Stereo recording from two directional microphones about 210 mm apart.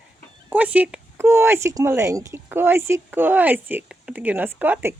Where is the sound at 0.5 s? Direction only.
5° right (ahead or behind).